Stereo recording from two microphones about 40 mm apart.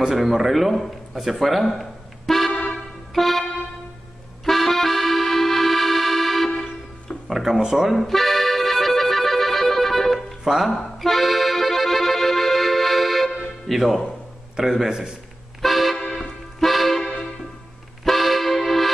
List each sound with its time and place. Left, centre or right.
0.1 s speech: centre
1.3 s music: centre
3.2 s speech: centre
4.5 s accordion: centre
7.2 s a man's voice: centre
7.9 s accordion: centre
10.4 s speech: centre
10.7 s accordion: centre
13.7 s a man's voice: centre
15.6 s music: centre
16.0 s music: left
16.5 s music: centre